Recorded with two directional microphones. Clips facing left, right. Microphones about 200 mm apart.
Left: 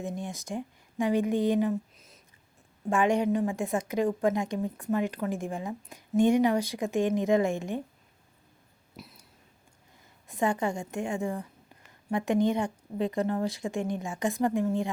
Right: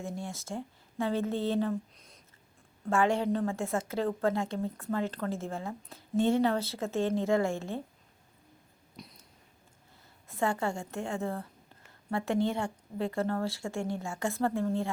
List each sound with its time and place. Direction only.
0.0 s speech: 20° left (ahead or behind)
2.9 s a woman's voice: 15° left (ahead or behind)
9.0 s a sound: 5° left (ahead or behind)
10.2 s a woman's voice: 15° left (ahead or behind)